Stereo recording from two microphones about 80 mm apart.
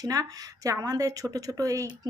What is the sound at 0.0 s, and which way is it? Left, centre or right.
Speech, right.